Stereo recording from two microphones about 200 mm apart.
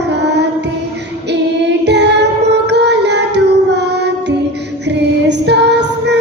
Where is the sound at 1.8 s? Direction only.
60° right (ahead or behind).